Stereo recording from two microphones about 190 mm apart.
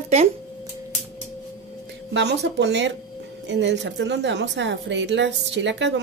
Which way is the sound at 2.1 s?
65° right (ahead or behind).